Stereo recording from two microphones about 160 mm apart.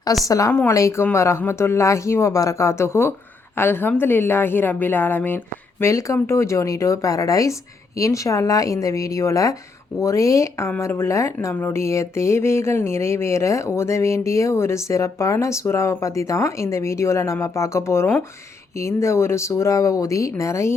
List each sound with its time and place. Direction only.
0.3 s speech: 20° left (ahead or behind)